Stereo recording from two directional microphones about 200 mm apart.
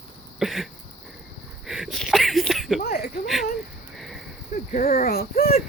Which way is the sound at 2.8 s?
50° left (ahead or behind).